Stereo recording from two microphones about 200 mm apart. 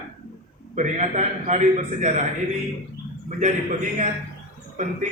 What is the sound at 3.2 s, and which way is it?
Speech, 40° right (ahead or behind).